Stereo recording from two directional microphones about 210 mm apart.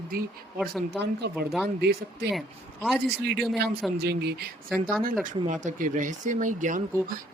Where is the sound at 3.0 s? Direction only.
50° right (ahead or behind).